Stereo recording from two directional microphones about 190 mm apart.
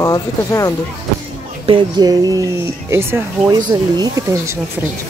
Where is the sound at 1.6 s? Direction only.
25° right (ahead or behind).